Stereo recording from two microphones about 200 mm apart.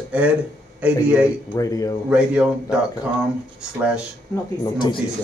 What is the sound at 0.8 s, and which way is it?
Speech, 5° right (ahead or behind).